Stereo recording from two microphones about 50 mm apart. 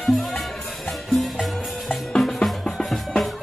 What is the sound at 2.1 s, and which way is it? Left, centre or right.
Music, centre.